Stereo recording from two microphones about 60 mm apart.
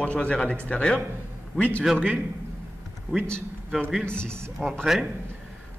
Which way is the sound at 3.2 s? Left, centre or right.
Centre.